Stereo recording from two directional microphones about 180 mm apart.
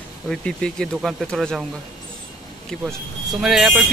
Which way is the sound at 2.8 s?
Centre (ahead or behind).